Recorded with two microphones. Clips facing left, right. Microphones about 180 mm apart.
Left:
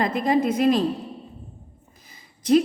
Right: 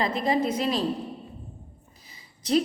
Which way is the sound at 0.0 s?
50° left (ahead or behind).